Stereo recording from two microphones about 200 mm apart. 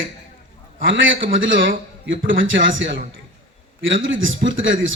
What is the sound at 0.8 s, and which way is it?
A man's voice, 70° right (ahead or behind).